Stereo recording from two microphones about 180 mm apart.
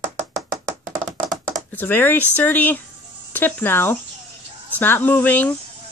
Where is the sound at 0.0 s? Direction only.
45° right (ahead or behind).